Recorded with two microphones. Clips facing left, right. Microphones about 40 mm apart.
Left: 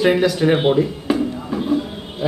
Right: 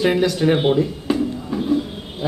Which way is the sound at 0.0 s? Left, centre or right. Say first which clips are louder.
Left 2 dB; centre.